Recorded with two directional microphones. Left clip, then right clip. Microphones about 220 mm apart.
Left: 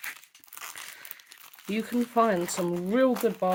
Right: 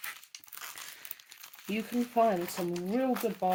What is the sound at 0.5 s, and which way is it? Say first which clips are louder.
Crumpling: left 4 dB; 25° left (ahead or behind).